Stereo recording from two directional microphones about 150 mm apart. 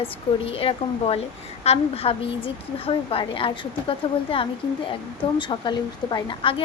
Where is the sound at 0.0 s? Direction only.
40° left (ahead or behind).